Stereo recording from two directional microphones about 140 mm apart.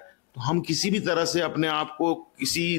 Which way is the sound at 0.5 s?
15° left (ahead or behind).